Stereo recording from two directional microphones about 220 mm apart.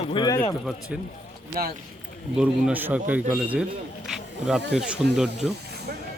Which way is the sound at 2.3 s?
5° right (ahead or behind).